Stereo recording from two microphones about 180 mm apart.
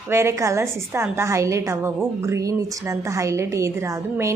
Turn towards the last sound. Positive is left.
turn(degrees=-15)  # may be behind; listen again after turning